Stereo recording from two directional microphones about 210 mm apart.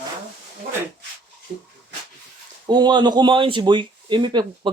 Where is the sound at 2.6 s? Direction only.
20° right (ahead or behind).